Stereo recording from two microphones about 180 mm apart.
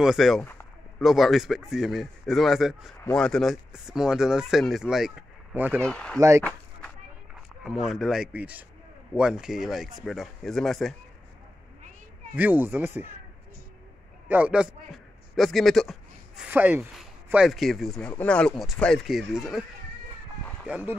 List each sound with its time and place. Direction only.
0.0 s speech: centre (ahead or behind)
0.4 s a sound: 10° left (ahead or behind)
1.0 s speech: centre (ahead or behind)
5.8 s speech: 5° left (ahead or behind)
6.1 s speech: 15° right (ahead or behind)
7.6 s speech: centre (ahead or behind)
12.4 s speech: 10° right (ahead or behind)
14.3 s speech: 5° right (ahead or behind)
20.6 s speech: 5° right (ahead or behind)